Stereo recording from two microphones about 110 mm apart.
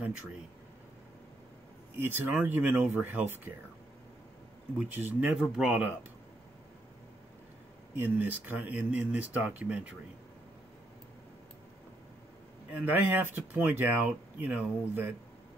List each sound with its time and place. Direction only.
2.0 s speech: 20° right (ahead or behind)
4.7 s speech: 15° right (ahead or behind)
5.3 s speech: 5° right (ahead or behind)
8.0 s speech: 20° right (ahead or behind)
12.7 s speech: 15° right (ahead or behind)